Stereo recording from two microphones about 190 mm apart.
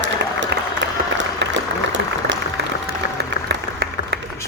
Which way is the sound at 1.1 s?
75° right (ahead or behind).